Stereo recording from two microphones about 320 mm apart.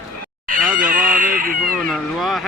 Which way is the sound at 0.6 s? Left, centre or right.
Right.